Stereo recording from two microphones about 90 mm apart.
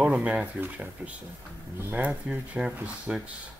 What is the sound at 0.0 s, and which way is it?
Speech, 15° right (ahead or behind).